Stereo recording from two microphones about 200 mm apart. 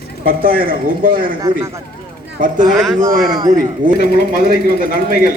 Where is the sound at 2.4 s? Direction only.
40° right (ahead or behind).